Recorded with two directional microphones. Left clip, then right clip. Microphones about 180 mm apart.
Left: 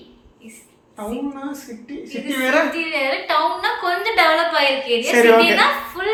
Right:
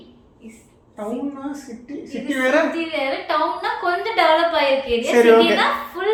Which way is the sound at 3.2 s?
20° right (ahead or behind).